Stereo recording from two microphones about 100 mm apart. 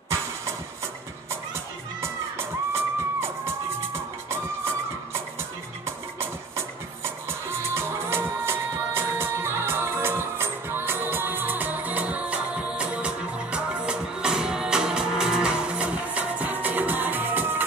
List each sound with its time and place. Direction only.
2.0 s music: 25° right (ahead or behind)
5.9 s music: 25° right (ahead or behind)